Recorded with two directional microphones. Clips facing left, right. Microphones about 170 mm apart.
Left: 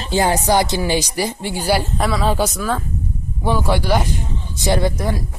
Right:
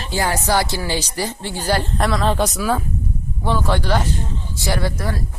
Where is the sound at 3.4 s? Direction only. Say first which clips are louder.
Left 2 dB; 10° left (ahead or behind).